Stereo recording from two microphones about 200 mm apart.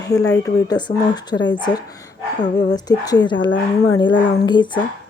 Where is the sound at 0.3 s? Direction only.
15° left (ahead or behind).